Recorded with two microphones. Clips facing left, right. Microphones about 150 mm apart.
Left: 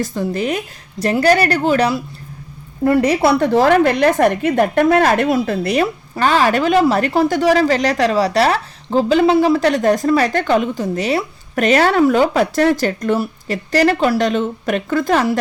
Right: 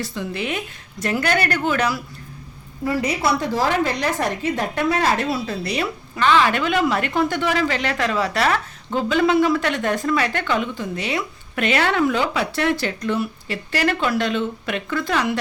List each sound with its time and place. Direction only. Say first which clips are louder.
0.0 s a woman's voice: left 7 dB; 45° left (ahead or behind)
2.8 s a woman's voice: left 8 dB; 60° left (ahead or behind); by 15.4 s 45° left (ahead or behind)